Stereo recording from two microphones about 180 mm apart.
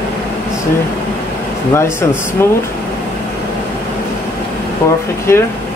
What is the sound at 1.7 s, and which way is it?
Speech, 15° left (ahead or behind).